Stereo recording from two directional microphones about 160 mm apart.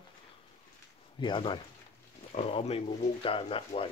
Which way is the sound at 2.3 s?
40° left (ahead or behind).